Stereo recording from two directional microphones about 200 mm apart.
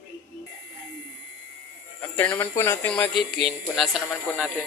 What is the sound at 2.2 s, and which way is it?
Speech, 10° left (ahead or behind).